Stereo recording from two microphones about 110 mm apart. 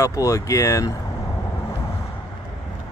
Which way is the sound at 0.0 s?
30° left (ahead or behind).